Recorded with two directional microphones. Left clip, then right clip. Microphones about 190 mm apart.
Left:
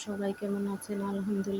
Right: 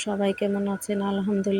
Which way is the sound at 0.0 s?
25° right (ahead or behind).